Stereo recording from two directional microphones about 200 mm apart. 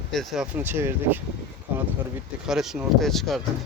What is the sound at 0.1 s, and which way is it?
Speech, centre (ahead or behind).